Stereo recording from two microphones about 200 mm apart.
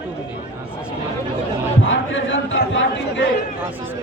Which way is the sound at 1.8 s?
70° left (ahead or behind).